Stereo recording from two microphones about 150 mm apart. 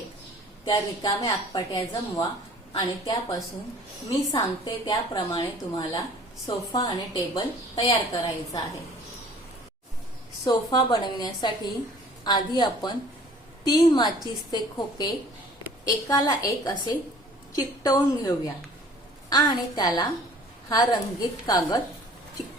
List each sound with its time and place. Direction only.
0.7 s a woman's voice: 20° left (ahead or behind)
10.4 s a woman's voice: 30° left (ahead or behind)